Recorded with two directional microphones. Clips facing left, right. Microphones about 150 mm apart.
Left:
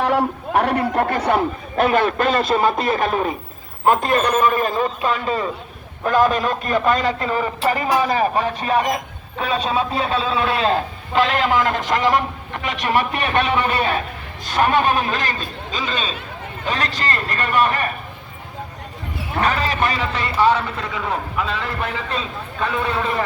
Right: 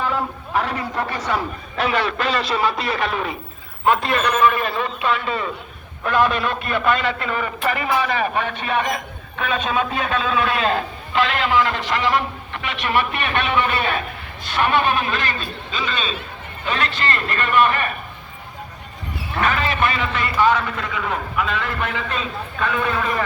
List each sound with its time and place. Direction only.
0.5 s a man's voice: 60° left (ahead or behind); by 17.9 s 35° left (ahead or behind)
19.4 s a man's voice: 35° left (ahead or behind)